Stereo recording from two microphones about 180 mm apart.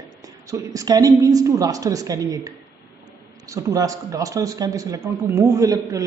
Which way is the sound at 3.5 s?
20° right (ahead or behind).